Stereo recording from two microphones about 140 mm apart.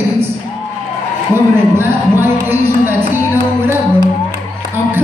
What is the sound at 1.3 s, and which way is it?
Speech, 15° right (ahead or behind).